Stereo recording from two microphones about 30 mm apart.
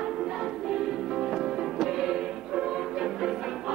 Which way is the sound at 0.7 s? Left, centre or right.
Centre.